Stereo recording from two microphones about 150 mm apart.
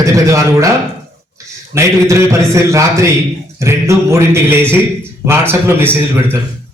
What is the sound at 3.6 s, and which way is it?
Music, 20° right (ahead or behind).